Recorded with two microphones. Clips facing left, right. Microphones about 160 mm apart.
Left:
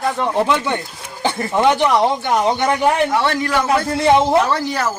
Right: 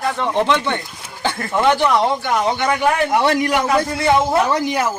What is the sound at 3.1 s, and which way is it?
A man's voice, 20° right (ahead or behind).